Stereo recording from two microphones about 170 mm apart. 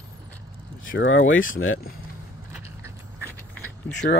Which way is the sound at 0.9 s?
90° left.